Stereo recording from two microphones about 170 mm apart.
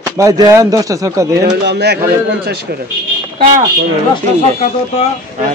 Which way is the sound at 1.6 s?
75° right (ahead or behind).